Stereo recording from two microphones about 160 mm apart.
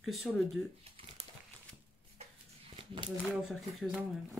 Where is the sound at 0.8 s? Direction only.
35° right (ahead or behind).